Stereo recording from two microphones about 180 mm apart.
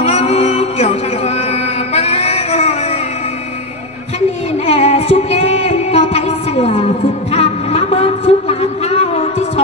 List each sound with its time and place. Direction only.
0.0 s music: 35° left (ahead or behind)
2.0 s music: 35° left (ahead or behind)
4.6 s a sound: 35° left (ahead or behind)